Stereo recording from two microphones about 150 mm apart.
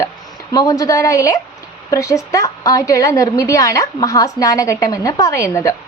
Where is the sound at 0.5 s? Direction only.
20° left (ahead or behind).